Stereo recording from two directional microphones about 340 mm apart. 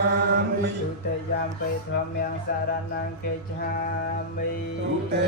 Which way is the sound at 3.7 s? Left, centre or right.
Left.